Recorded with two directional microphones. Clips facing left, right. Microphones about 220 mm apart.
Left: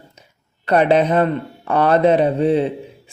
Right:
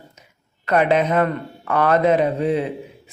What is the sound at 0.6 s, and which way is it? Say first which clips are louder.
Speech: left 3 dB; 30° left (ahead or behind).